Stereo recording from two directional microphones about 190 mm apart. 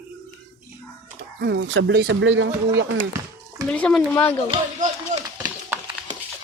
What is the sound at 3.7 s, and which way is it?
Speech, 5° left (ahead or behind).